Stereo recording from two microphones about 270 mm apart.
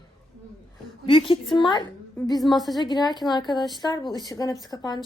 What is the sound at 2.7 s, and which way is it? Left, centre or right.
A woman's voice, centre.